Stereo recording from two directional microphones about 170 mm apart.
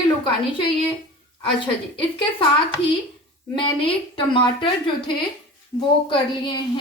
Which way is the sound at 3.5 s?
30° left (ahead or behind).